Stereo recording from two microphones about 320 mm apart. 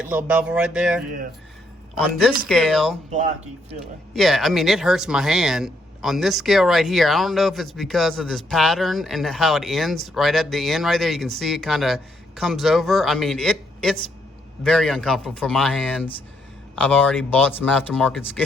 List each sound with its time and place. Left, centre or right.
0.0 s speech: centre
2.5 s speech: centre
3.1 s speech: right
4.1 s speech: centre